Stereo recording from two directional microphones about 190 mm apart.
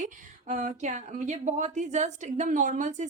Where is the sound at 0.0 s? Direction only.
40° right (ahead or behind).